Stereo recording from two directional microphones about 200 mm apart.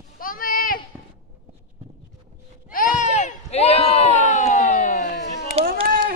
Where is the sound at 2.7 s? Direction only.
40° left (ahead or behind).